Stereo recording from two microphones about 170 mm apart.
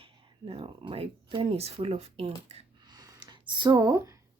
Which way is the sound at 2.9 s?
25° right (ahead or behind).